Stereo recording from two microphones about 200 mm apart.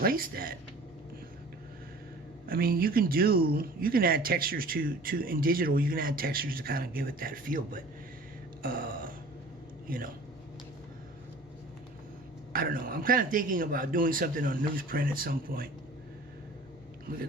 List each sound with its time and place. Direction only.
0.0 s speech: 45° right (ahead or behind)
2.5 s speech: 50° right (ahead or behind)
8.6 s a sound: 45° right (ahead or behind)
9.8 s a man's voice: 45° right (ahead or behind)
12.5 s speech: 45° right (ahead or behind)